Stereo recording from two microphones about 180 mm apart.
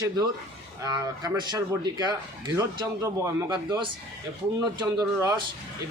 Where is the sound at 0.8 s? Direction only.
20° right (ahead or behind).